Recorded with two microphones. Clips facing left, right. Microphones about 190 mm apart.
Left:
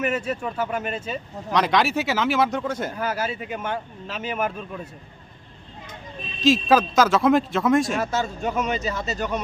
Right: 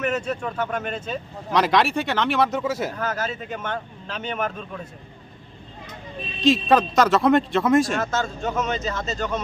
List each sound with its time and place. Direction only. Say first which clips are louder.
0.0 s speech: even; 10° left (ahead or behind)
3.0 s a man's voice: left 1 dB; 10° left (ahead or behind)
6.4 s speech: even; centre (ahead or behind)
8.0 s a man's voice: even; 15° left (ahead or behind)